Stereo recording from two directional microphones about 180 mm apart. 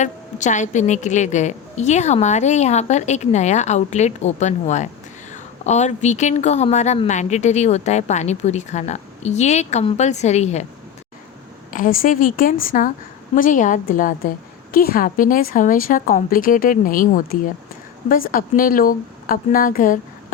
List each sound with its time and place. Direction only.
0.0 s speech: 40° left (ahead or behind)
11.7 s a woman's voice: 50° left (ahead or behind)